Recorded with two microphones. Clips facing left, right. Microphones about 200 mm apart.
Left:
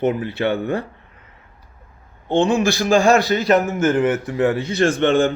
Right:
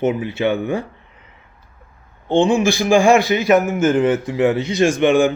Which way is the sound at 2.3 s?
10° right (ahead or behind).